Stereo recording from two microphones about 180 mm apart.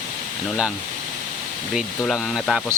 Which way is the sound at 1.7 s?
Centre (ahead or behind).